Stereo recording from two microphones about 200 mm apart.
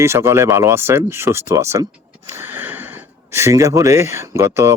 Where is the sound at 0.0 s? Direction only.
15° right (ahead or behind).